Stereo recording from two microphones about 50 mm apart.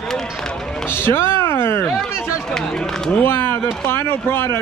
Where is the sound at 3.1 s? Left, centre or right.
Left.